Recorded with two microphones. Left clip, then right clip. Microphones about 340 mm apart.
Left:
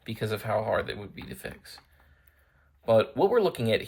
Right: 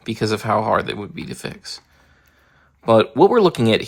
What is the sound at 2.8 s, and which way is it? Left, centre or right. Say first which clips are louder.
Speech: right 9 dB; right.